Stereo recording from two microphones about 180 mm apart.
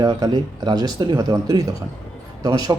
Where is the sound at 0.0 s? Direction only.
20° right (ahead or behind).